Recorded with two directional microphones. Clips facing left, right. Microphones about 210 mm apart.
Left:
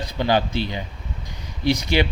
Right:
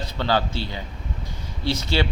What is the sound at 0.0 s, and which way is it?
Speech, 15° left (ahead or behind).